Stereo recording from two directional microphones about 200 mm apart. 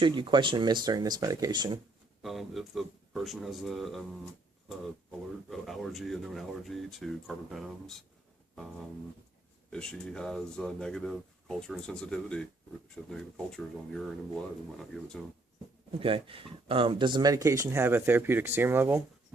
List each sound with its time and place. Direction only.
0.0 s speech: 25° right (ahead or behind)
2.2 s speech: centre (ahead or behind)
5.5 s speech: centre (ahead or behind)
9.6 s speech: 5° left (ahead or behind)
15.9 s speech: 25° right (ahead or behind); by 19.0 s 10° right (ahead or behind)